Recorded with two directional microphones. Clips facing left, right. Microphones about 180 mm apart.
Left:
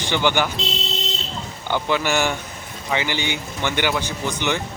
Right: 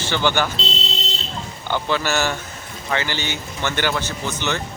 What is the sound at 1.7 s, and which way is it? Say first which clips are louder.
Speech: left 1 dB; 15° left (ahead or behind).